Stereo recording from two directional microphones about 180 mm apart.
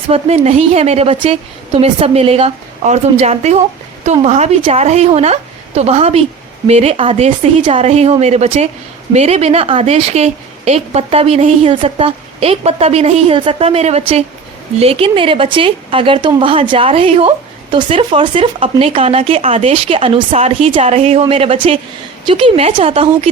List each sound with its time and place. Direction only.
0.1 s a woman's voice: 35° right (ahead or behind)